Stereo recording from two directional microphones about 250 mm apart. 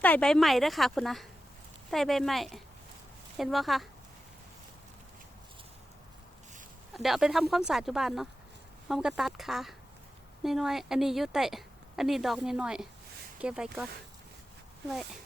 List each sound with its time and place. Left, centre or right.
0.0 s a woman's voice: centre
6.9 s a woman's voice: centre
14.8 s a woman's voice: centre